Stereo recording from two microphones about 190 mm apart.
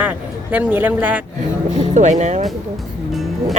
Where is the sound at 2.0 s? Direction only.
40° right (ahead or behind).